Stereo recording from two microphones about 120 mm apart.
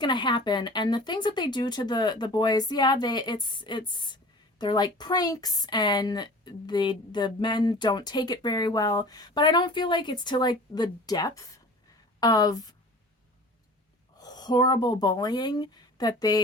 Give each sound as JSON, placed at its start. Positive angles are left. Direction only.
{"t": 0.0, "sound": "speech", "side_deg": 40}
{"t": 14.2, "sound": "speech", "side_deg": 35}